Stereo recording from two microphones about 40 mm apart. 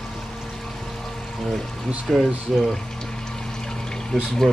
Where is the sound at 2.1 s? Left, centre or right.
Centre.